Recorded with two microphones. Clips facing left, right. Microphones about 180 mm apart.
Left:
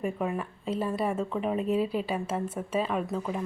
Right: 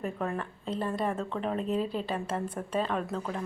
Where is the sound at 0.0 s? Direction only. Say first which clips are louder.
Left 3 dB; 10° left (ahead or behind).